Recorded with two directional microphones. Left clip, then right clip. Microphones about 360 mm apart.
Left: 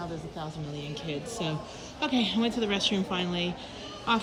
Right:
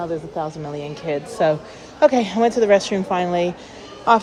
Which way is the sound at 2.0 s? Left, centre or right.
Centre.